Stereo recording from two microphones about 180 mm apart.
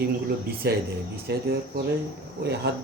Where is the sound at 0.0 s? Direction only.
65° right (ahead or behind).